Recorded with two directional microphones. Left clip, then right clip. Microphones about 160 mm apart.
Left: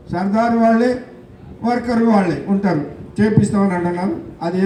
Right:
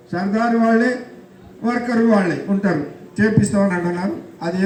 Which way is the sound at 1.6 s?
60° left (ahead or behind).